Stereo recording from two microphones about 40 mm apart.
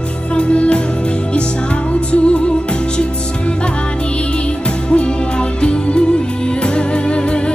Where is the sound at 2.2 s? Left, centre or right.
Left.